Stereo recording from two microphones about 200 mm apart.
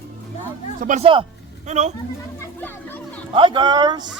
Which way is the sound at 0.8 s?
35° right (ahead or behind).